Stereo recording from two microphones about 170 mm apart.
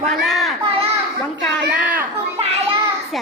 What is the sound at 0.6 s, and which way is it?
Children playing, 35° right (ahead or behind).